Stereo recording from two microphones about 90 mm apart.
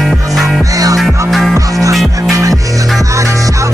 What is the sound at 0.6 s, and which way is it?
Music, 40° right (ahead or behind).